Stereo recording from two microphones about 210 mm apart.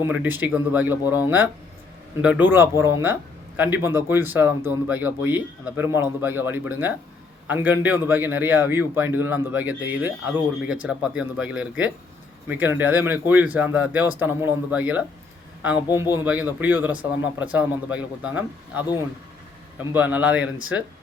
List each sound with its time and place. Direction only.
0.1 s speech: 10° right (ahead or behind)
1.0 s speech: 20° left (ahead or behind)
2.2 s speech: 5° right (ahead or behind)
16.2 s speech: 5° right (ahead or behind)
19.9 s speech: 10° right (ahead or behind)